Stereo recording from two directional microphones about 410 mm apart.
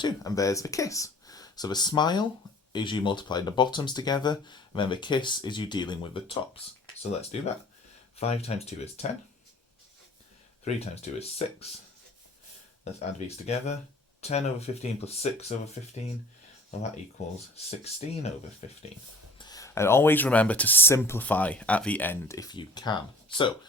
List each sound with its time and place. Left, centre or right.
0.0 s speech: centre
10.6 s speech: centre
12.8 s speech: centre
17.5 s speech: centre